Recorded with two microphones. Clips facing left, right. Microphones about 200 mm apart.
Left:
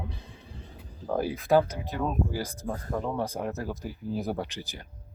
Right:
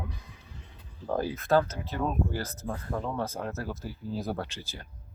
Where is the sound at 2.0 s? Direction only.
Centre (ahead or behind).